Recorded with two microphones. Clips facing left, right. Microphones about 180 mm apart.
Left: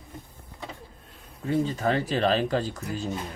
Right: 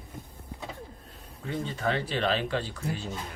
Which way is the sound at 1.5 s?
40° left (ahead or behind).